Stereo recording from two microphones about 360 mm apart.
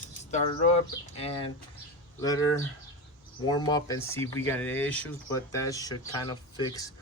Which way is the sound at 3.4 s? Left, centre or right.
Centre.